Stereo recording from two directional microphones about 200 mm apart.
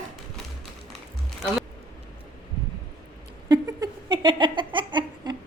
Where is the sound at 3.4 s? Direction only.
20° right (ahead or behind).